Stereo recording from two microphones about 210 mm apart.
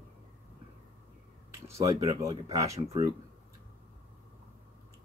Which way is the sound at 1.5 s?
15° right (ahead or behind).